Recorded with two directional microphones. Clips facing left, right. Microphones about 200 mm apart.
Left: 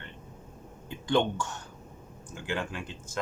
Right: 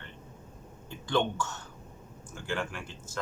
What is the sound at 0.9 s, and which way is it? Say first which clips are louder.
Speech: left 3 dB; 15° left (ahead or behind).